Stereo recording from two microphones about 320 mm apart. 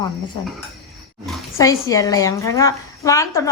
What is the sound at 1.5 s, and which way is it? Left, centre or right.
A woman's voice, centre.